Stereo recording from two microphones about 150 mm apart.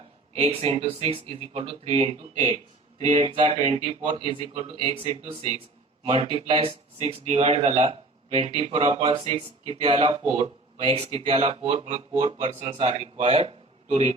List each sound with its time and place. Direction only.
0.3 s speech: 45° right (ahead or behind)
3.2 s speech: 35° right (ahead or behind)